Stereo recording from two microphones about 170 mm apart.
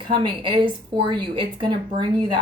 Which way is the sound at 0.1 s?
30° right (ahead or behind).